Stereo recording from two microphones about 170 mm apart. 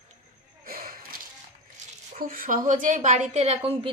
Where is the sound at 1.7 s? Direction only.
55° right (ahead or behind).